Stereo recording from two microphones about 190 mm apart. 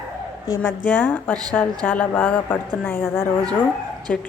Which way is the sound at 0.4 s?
15° left (ahead or behind).